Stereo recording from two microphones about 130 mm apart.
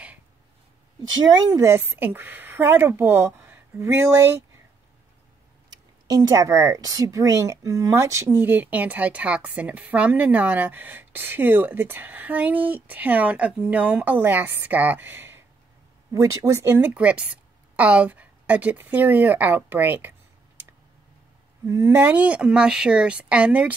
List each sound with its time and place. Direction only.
1.2 s a woman's voice: 30° right (ahead or behind)
5.7 s speech: 30° right (ahead or behind)
21.6 s speech: 20° right (ahead or behind)